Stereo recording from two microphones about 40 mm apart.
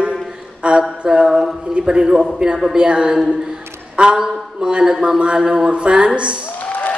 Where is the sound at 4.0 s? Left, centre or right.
Right.